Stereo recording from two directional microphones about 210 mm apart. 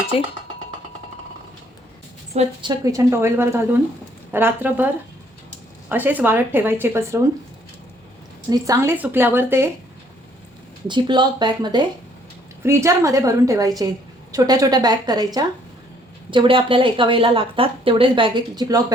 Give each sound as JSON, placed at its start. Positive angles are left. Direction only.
{"t": 0.1, "sound": "speech", "side_deg": 25}
{"t": 2.3, "sound": "a woman's voice", "side_deg": -25}
{"t": 5.9, "sound": "a woman's voice", "side_deg": -10}
{"t": 8.4, "sound": "a woman's voice", "side_deg": -15}
{"t": 10.8, "sound": "a woman's voice", "side_deg": -20}